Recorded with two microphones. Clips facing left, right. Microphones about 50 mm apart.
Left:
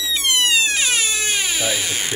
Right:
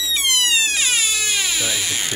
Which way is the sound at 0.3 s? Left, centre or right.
Left.